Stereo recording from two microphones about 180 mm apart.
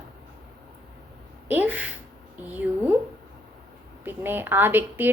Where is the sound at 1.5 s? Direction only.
10° right (ahead or behind).